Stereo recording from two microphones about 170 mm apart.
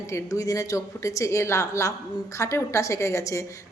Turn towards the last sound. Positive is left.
turn(degrees=15)  # may be behind; listen again after turning